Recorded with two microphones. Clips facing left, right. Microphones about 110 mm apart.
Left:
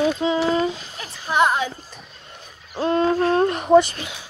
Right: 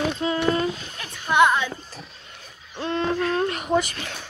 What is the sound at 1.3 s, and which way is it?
Music, 35° left (ahead or behind).